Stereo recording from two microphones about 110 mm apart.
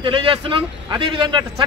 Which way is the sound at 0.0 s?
50° right (ahead or behind).